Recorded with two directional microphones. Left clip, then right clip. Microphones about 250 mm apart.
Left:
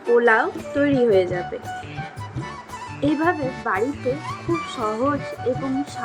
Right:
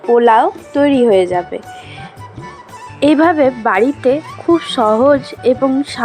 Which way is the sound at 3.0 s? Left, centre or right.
Right.